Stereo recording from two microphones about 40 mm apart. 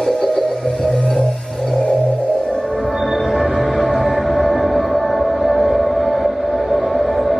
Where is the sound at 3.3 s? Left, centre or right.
Centre.